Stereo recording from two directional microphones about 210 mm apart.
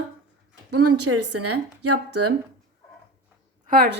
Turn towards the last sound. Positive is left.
turn(degrees=-50)  # may be behind; listen again after turning